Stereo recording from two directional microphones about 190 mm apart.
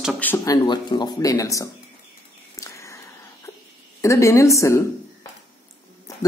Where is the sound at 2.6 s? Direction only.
15° left (ahead or behind).